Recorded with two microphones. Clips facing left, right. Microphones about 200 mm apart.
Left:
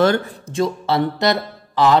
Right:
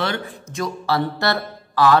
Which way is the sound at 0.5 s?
25° left (ahead or behind).